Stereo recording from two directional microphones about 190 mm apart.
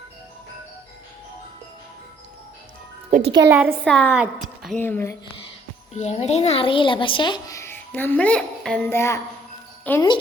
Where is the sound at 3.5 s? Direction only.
10° right (ahead or behind).